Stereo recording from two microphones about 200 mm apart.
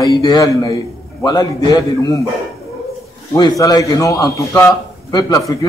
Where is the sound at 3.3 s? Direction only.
20° left (ahead or behind).